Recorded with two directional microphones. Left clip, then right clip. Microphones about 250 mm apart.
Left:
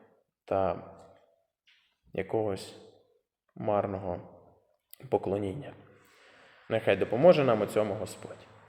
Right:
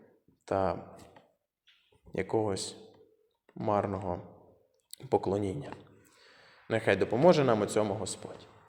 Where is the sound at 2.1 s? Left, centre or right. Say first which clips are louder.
Even; centre.